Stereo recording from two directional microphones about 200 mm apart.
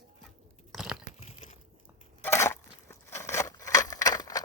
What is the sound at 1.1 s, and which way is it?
Crunch, 35° left (ahead or behind).